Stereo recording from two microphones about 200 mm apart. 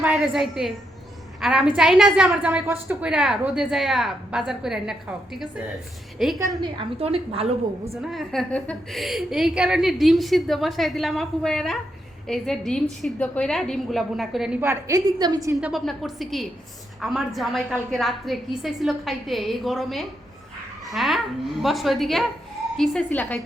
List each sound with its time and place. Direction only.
0.0 s a woman's voice: 5° right (ahead or behind)
6.4 s a woman's voice: 20° right (ahead or behind)
8.0 s a woman's voice: centre (ahead or behind); by 15.5 s 20° right (ahead or behind)
15.5 s a woman's voice: centre (ahead or behind)